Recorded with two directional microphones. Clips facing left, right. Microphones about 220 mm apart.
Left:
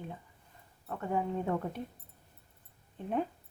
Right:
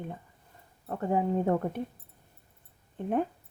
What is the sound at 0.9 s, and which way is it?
Speech, 35° right (ahead or behind).